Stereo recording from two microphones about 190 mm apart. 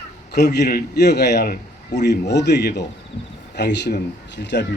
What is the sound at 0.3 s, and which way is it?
Speech, 60° left (ahead or behind).